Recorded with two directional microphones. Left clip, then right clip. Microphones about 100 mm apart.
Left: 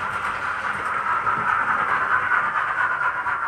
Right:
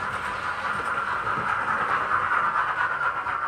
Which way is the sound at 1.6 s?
15° right (ahead or behind).